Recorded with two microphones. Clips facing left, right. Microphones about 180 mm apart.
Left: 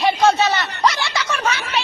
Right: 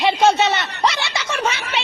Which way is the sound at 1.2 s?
25° right (ahead or behind).